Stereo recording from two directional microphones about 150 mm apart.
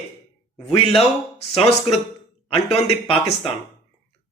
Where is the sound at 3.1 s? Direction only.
40° left (ahead or behind).